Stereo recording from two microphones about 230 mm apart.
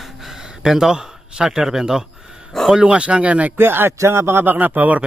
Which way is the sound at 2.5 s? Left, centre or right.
Centre.